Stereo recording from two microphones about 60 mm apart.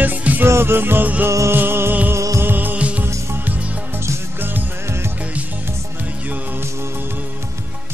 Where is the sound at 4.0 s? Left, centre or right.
Right.